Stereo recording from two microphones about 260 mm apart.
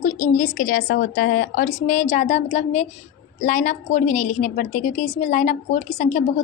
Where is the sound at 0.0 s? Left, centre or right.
Left.